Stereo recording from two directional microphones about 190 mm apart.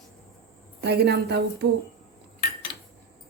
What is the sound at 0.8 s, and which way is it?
Speech, 60° right (ahead or behind).